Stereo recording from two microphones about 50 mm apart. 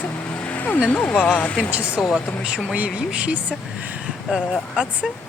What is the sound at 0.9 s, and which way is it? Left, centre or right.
Speech, left.